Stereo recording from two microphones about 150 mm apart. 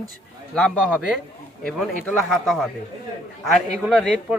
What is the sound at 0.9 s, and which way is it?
A man's voice, 5° right (ahead or behind).